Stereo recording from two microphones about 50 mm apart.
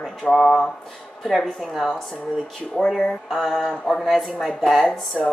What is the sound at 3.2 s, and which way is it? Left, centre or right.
Speech, centre.